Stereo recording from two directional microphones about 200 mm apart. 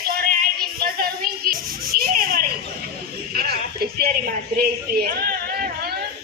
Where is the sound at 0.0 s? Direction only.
50° right (ahead or behind).